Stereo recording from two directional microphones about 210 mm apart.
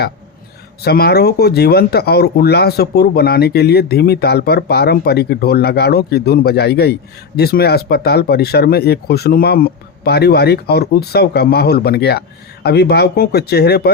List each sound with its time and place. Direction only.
0.8 s speech: 50° left (ahead or behind)